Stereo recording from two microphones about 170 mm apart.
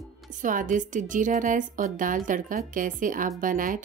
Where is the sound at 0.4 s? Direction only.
50° right (ahead or behind).